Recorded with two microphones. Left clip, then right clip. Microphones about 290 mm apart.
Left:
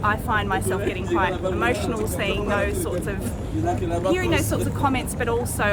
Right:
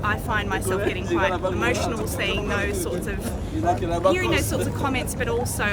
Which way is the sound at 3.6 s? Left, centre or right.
Centre.